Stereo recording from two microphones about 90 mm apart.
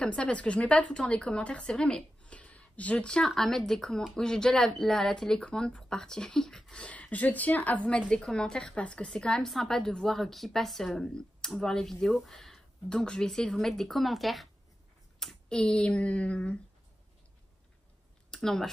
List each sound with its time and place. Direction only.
0.0 s a woman's voice: 10° left (ahead or behind)
18.3 s speech: 5° left (ahead or behind)